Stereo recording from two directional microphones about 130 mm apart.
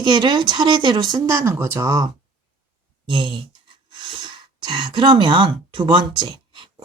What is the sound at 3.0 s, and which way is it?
A woman's voice, 40° right (ahead or behind).